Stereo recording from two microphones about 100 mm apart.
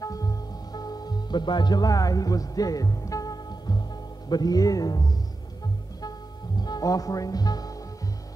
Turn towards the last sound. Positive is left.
turn(degrees=40)  # may be behind; listen again after turning